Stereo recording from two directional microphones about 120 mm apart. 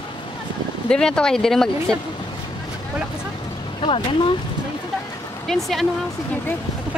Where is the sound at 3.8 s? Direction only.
50° left (ahead or behind).